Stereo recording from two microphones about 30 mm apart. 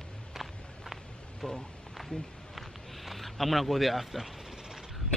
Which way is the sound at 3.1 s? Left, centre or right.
Centre.